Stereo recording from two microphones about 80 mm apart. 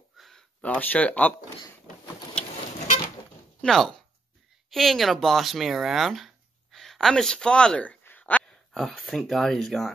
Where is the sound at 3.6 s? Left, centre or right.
Centre.